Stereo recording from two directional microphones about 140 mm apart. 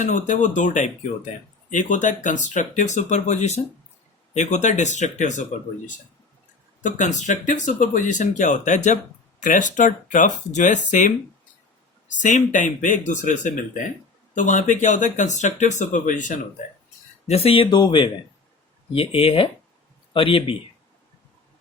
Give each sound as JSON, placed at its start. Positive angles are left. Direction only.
{"t": 0.0, "sound": "speech", "side_deg": 60}
{"t": 6.8, "sound": "speech", "side_deg": 60}
{"t": 12.2, "sound": "speech", "side_deg": 65}
{"t": 17.2, "sound": "speech", "side_deg": 45}